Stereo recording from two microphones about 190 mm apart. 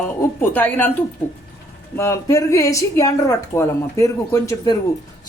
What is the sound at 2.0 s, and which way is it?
A woman's voice, 15° left (ahead or behind).